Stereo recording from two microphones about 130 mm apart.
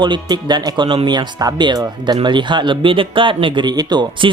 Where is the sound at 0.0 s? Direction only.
35° right (ahead or behind).